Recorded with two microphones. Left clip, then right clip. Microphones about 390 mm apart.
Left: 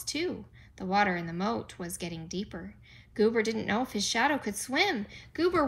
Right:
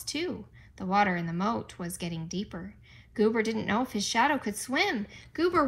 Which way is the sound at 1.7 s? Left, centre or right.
Centre.